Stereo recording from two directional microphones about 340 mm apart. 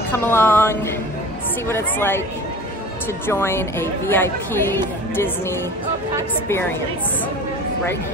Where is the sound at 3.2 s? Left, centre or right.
Centre.